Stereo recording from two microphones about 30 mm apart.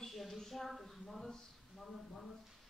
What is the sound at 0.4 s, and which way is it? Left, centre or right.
Speech, centre.